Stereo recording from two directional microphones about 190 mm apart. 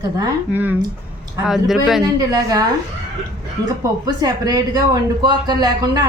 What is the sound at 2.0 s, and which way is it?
Speech, 20° right (ahead or behind).